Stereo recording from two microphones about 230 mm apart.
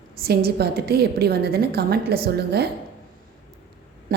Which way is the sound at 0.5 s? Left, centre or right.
Right.